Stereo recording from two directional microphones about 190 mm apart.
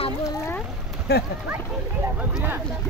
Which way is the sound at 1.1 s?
55° left (ahead or behind).